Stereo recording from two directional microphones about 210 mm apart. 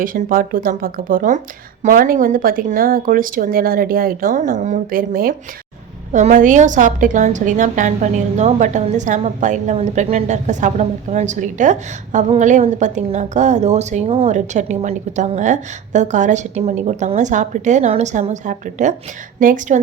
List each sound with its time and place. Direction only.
0.0 s a woman's voice: 40° right (ahead or behind)